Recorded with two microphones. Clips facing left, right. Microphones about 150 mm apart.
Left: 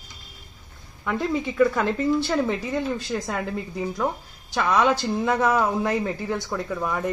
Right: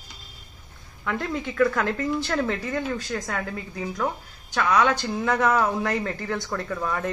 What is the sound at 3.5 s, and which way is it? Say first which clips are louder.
Speech: left 4 dB; 5° left (ahead or behind).